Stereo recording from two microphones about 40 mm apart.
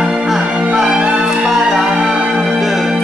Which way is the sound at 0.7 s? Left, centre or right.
Centre.